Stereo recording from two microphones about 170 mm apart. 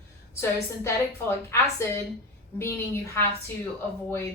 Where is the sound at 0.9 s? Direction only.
15° left (ahead or behind).